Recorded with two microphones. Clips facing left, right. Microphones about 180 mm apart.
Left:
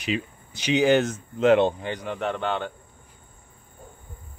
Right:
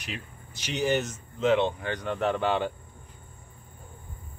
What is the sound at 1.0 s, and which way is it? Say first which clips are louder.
Speech: left 6 dB; 55° left (ahead or behind).